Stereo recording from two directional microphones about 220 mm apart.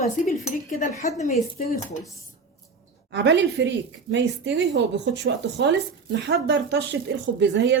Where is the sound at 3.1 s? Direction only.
55° right (ahead or behind).